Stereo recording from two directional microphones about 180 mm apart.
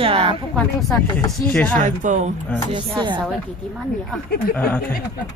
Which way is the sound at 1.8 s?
45° right (ahead or behind).